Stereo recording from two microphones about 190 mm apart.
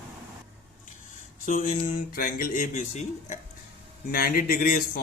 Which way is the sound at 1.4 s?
45° left (ahead or behind).